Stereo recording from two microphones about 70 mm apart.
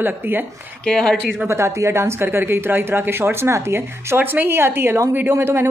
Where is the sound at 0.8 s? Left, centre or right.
Centre.